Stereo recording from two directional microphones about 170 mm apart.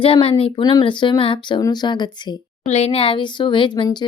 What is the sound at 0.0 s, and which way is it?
Speech, 30° left (ahead or behind).